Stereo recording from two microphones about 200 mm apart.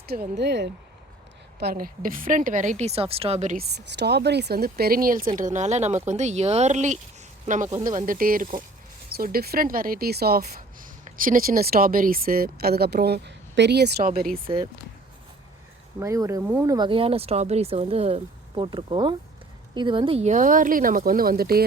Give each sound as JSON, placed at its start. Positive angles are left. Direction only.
{"t": 0.3, "sound": "speech", "side_deg": -60}
{"t": 3.6, "sound": "a woman's voice", "side_deg": -55}
{"t": 16.0, "sound": "speech", "side_deg": -15}
{"t": 16.7, "sound": "a woman's voice", "side_deg": -25}